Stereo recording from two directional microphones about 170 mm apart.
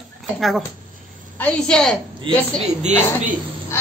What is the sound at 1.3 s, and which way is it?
Speech, 5° left (ahead or behind).